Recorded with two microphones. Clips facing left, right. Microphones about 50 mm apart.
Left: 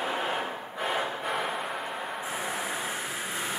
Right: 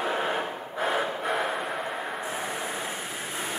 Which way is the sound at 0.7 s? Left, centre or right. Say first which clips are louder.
Right 3 dB; centre.